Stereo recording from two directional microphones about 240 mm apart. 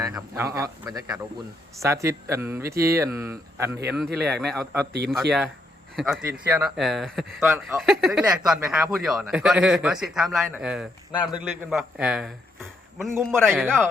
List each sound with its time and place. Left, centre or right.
0.1 s speech: centre
3.9 s speech: centre
4.9 s speech: right
6.0 s speech: centre